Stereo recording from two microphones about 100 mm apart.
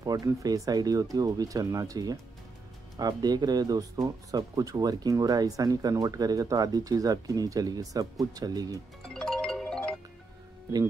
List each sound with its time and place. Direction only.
0.0 s speech: 35° right (ahead or behind)
9.0 s music: 5° left (ahead or behind)